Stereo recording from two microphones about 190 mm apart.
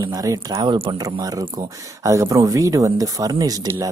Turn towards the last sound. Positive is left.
turn(degrees=-20)  # may be behind; listen again after turning